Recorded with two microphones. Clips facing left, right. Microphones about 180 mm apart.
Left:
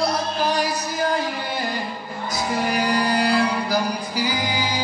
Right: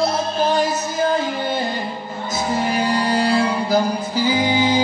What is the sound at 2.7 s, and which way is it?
Music, 25° right (ahead or behind).